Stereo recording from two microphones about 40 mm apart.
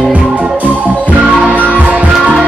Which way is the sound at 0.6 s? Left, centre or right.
Right.